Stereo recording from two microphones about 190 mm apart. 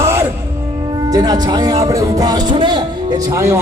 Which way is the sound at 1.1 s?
20° right (ahead or behind).